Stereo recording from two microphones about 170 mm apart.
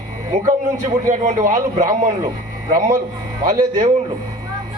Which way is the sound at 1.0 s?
50° right (ahead or behind).